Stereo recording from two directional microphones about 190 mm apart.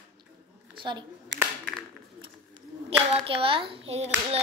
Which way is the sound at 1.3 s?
70° right (ahead or behind).